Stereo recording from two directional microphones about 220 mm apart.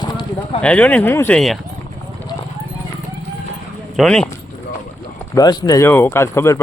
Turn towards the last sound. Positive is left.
turn(degrees=10)  # may be behind; listen again after turning